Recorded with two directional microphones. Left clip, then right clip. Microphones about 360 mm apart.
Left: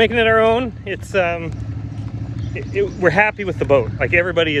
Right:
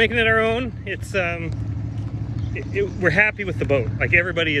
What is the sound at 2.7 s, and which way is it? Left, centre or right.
Speech, centre.